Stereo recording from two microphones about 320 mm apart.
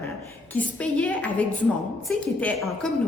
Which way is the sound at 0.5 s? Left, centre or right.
Centre.